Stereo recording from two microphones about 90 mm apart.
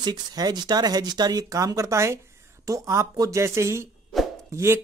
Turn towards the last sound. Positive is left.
turn(degrees=-30)  # may be behind; listen again after turning